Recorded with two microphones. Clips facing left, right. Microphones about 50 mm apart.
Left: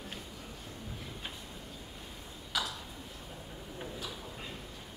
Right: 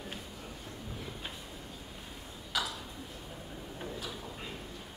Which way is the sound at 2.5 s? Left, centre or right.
Centre.